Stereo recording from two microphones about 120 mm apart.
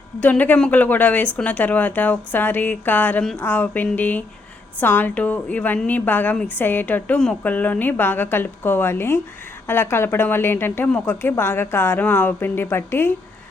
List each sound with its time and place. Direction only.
0.2 s a woman's voice: 15° left (ahead or behind)